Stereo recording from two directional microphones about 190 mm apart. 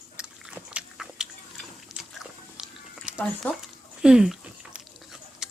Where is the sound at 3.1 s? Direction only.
5° right (ahead or behind).